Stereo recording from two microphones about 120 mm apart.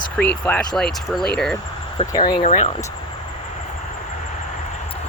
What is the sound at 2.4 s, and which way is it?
Speech, 90° left.